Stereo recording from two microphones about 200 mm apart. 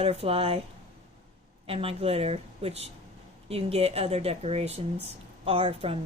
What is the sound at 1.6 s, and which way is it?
A woman's voice, 30° right (ahead or behind).